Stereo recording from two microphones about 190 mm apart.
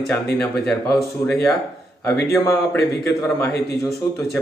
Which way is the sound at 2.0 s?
15° left (ahead or behind).